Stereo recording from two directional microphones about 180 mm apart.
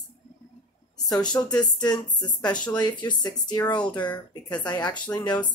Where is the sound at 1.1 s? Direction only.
20° left (ahead or behind).